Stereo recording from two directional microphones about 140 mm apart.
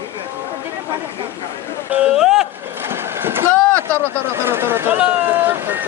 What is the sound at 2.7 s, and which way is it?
Vehicle, 15° right (ahead or behind).